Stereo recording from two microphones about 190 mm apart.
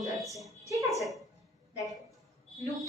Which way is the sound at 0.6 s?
15° right (ahead or behind).